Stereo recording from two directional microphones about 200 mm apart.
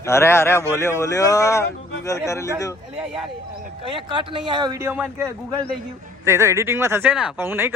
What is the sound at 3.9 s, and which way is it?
Speech, 25° right (ahead or behind).